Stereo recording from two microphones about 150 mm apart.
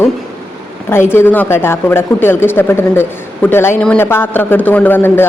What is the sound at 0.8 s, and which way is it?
A woman's voice, 15° left (ahead or behind).